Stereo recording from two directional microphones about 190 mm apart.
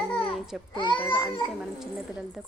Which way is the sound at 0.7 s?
25° left (ahead or behind).